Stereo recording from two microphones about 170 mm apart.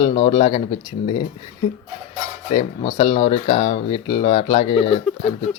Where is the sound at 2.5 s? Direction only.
30° left (ahead or behind).